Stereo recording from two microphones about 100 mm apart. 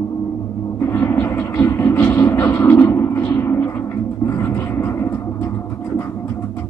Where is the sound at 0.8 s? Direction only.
25° left (ahead or behind).